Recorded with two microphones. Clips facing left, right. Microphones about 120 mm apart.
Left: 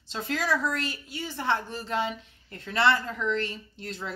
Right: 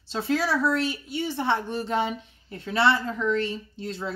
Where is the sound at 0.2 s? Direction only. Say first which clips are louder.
Right 3 dB; 5° right (ahead or behind).